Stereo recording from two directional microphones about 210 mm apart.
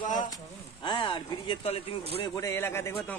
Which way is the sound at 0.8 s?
20° left (ahead or behind).